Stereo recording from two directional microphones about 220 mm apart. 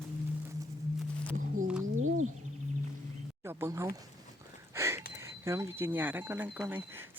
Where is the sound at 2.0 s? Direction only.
70° right (ahead or behind).